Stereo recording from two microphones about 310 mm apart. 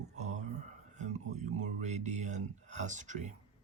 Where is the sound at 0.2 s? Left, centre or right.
Right.